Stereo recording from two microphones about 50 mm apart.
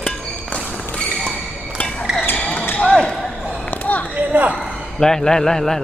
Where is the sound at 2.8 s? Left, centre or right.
Centre.